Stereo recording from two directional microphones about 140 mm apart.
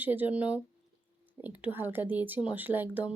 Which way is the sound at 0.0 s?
10° right (ahead or behind).